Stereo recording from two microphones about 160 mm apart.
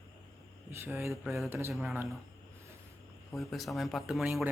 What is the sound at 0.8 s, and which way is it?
Speech, 15° right (ahead or behind).